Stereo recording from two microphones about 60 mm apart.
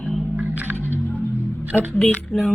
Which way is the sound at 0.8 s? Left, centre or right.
Left.